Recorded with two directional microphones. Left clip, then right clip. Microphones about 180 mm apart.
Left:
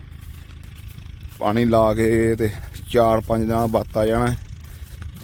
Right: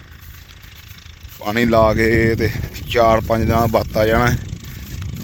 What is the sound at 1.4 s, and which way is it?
Speech, 10° left (ahead or behind).